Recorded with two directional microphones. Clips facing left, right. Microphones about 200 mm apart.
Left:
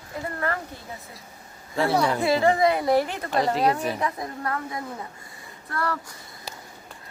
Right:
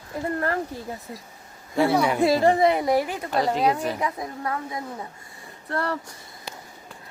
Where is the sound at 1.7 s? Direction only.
5° right (ahead or behind).